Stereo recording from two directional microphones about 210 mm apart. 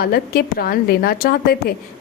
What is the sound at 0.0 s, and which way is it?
A woman's voice, 45° left (ahead or behind).